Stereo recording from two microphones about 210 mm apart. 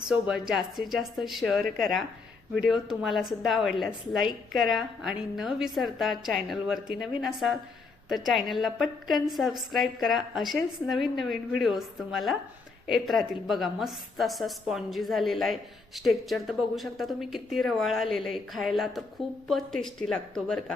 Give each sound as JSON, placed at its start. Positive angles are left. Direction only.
{"t": 0.1, "sound": "a woman's voice", "side_deg": -5}